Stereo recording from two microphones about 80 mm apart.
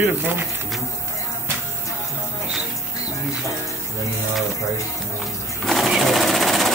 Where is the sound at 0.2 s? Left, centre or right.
Right.